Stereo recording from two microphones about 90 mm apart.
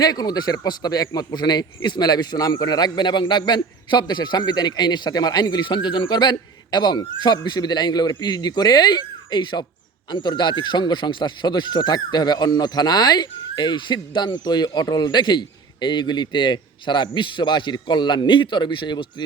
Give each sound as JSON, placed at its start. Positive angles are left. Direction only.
{"t": 0.0, "sound": "speech", "side_deg": 50}